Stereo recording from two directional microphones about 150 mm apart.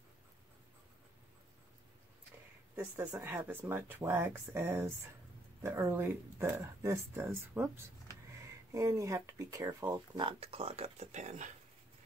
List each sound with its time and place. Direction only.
2.7 s speech: 15° right (ahead or behind)
10.1 s speech: 35° right (ahead or behind); by 11.5 s 55° right (ahead or behind)